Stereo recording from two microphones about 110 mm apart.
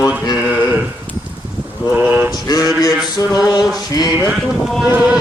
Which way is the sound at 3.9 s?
35° left (ahead or behind).